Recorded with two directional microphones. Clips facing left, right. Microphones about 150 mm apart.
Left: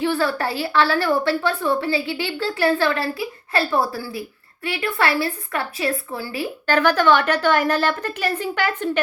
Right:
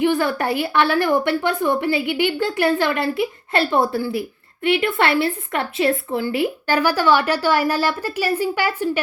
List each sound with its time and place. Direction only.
0.0 s a woman's voice: 15° right (ahead or behind)
6.7 s a woman's voice: 10° right (ahead or behind)